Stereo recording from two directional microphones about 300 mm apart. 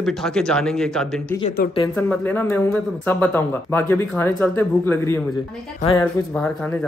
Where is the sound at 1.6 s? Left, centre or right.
Left.